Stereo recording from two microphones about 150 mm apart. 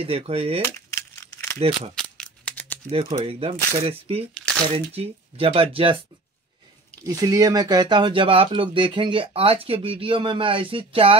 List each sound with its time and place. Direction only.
0.0 s speech: 40° right (ahead or behind)
0.7 s crumpling: 20° left (ahead or behind)
1.7 s a sound: centre (ahead or behind)
2.9 s speech: 40° right (ahead or behind)
7.1 s speech: 20° right (ahead or behind)